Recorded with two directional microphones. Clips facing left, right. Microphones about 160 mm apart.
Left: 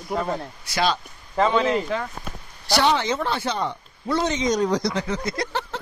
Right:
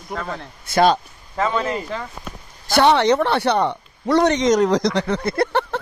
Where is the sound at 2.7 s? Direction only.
65° right (ahead or behind).